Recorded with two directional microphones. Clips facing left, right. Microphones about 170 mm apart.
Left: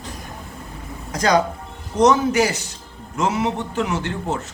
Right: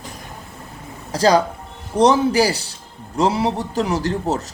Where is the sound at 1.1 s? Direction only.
30° right (ahead or behind).